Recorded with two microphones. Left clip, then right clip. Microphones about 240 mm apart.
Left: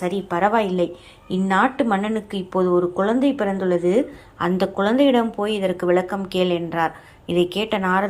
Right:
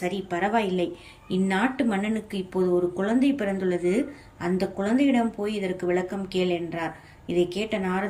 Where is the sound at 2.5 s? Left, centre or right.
Left.